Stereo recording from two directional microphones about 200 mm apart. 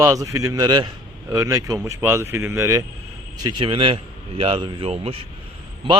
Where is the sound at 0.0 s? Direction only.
15° right (ahead or behind).